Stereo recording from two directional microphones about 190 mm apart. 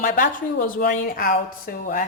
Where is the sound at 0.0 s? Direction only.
45° left (ahead or behind).